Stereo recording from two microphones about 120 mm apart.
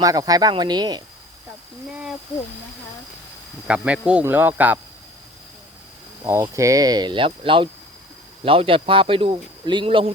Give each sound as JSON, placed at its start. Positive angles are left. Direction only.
{"t": 0.0, "sound": "speech", "side_deg": -30}
{"t": 1.9, "sound": "speech", "side_deg": -10}
{"t": 3.7, "sound": "speech", "side_deg": -10}
{"t": 6.2, "sound": "speech", "side_deg": -25}